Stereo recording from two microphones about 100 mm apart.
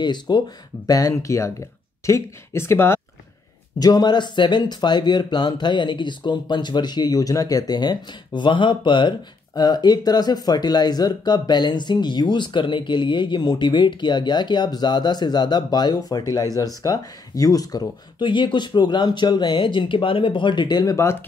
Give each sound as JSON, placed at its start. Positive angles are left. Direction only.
{"t": 0.0, "sound": "speech", "side_deg": 50}
{"t": 0.8, "sound": "speech", "side_deg": 35}
{"t": 3.8, "sound": "speech", "side_deg": 45}